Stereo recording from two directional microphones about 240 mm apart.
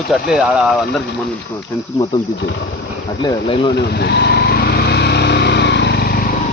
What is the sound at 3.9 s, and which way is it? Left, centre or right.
Vehicle, left.